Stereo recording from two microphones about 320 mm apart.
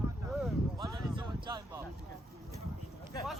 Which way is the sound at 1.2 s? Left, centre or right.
Centre.